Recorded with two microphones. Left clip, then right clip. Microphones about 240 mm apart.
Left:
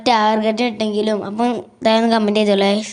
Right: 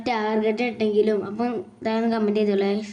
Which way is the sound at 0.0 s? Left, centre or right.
Left.